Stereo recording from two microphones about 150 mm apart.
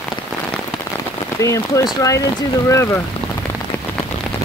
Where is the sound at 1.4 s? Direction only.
20° left (ahead or behind).